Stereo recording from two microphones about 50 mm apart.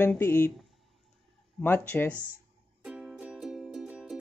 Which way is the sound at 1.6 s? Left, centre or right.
Left.